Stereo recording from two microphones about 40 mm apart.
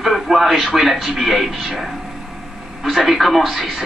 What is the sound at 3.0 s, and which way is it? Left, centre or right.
Speech, centre.